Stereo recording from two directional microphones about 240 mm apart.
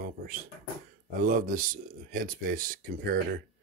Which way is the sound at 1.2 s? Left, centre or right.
Right.